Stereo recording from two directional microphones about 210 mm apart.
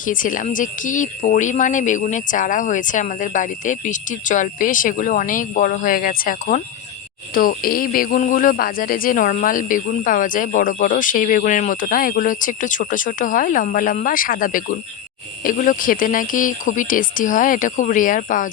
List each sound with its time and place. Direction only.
0.0 s speech: 40° left (ahead or behind)